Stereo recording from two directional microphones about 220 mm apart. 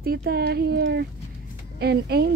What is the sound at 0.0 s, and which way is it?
Speech, 45° right (ahead or behind).